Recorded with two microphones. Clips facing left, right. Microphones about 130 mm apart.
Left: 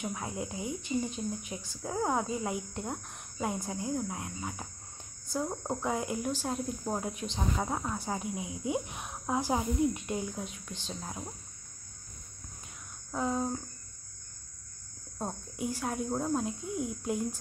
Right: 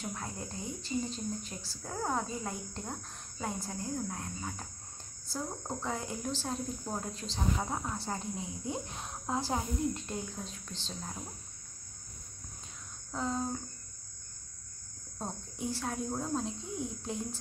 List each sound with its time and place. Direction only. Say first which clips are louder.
0.0 s speech: left 4 dB; 10° left (ahead or behind)
13.1 s speech: left 3 dB; 10° left (ahead or behind)
15.1 s speech: left 3 dB; 10° left (ahead or behind)